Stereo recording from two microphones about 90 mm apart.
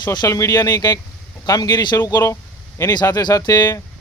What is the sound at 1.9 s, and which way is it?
Speech, 30° left (ahead or behind).